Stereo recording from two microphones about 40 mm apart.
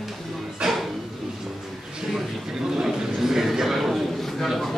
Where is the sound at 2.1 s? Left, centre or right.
Centre.